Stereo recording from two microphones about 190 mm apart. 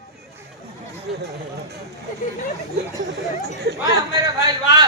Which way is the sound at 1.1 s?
55° right (ahead or behind).